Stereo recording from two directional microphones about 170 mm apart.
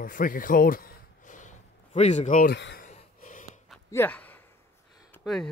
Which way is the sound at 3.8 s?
10° left (ahead or behind).